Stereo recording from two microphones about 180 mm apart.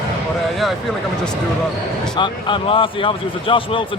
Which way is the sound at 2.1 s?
25° left (ahead or behind).